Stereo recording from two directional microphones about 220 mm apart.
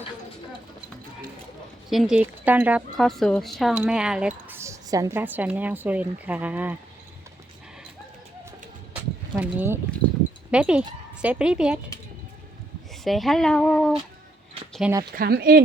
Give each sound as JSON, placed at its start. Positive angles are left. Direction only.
{"t": 1.9, "sound": "speech", "side_deg": 0}
{"t": 9.4, "sound": "speech", "side_deg": -10}
{"t": 12.9, "sound": "speech", "side_deg": 0}
{"t": 14.7, "sound": "a sound", "side_deg": -5}
{"t": 15.1, "sound": "speech", "side_deg": -45}